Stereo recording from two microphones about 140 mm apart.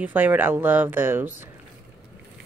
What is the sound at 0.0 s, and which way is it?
Speech, 15° right (ahead or behind).